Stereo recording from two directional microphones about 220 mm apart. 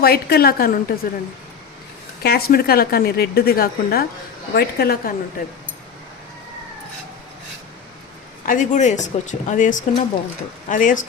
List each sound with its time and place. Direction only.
0.0 s a woman's voice: 45° left (ahead or behind)
2.2 s a woman's voice: 45° left (ahead or behind)
8.4 s speech: 35° left (ahead or behind)